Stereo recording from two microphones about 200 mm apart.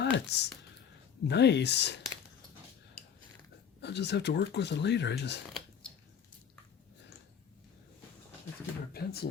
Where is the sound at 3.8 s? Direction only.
60° left (ahead or behind).